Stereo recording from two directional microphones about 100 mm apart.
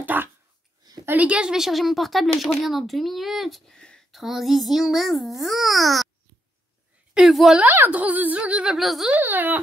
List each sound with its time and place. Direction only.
0.0 s dog: 20° right (ahead or behind)
1.0 s speech: 15° right (ahead or behind)
7.2 s a woman's voice: 5° right (ahead or behind)
7.6 s speech: 20° right (ahead or behind)
8.7 s speech: centre (ahead or behind)
9.1 s speech: 20° right (ahead or behind)